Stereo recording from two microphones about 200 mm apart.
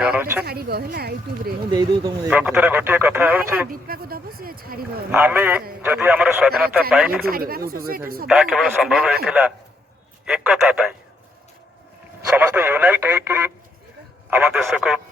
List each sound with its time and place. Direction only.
0.0 s speech: 10° right (ahead or behind)
0.4 s speech: 50° right (ahead or behind)
1.7 s speech: 20° right (ahead or behind)
2.3 s speech: 5° right (ahead or behind)
3.7 s a sound: 45° right (ahead or behind)
5.1 s speech: 10° right (ahead or behind)
7.3 s speech: 45° right (ahead or behind)
8.3 s speech: centre (ahead or behind)
12.3 s speech: 10° right (ahead or behind)